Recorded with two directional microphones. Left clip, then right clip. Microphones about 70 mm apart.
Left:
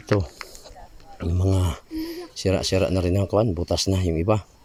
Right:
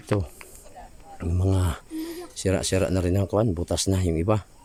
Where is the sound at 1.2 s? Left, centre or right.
Centre.